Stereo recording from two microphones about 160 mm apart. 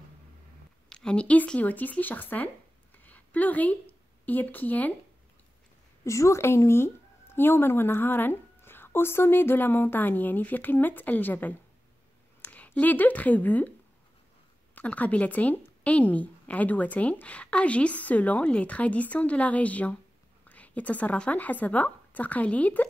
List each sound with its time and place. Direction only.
0.8 s speech: 5° left (ahead or behind)
3.0 s a sound: 10° left (ahead or behind)
6.0 s speech: 20° left (ahead or behind)
14.8 s a woman's voice: 10° left (ahead or behind)